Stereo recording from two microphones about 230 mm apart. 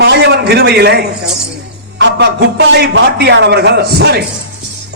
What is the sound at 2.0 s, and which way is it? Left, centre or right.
A man's voice, right.